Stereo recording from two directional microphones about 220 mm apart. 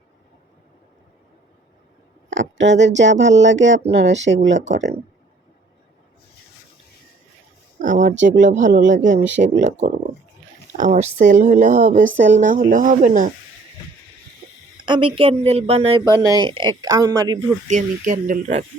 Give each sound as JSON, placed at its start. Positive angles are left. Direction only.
{"t": 2.3, "sound": "speech", "side_deg": -55}
{"t": 7.8, "sound": "a sound", "side_deg": -35}
{"t": 8.2, "sound": "speech", "side_deg": -35}
{"t": 14.8, "sound": "speech", "side_deg": -20}
{"t": 17.7, "sound": "speech", "side_deg": -35}